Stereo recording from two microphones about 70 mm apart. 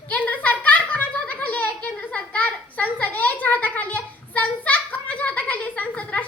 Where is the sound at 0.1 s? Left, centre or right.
Left.